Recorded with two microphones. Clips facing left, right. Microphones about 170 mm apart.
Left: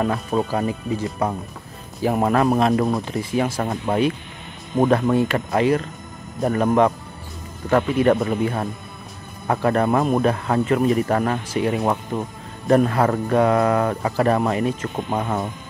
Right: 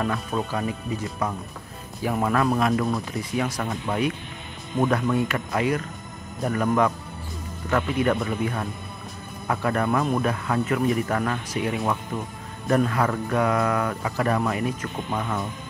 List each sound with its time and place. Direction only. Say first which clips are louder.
0.0 s speech: left 5 dB; 35° left (ahead or behind)
2.7 s speech: left 4 dB; 20° left (ahead or behind)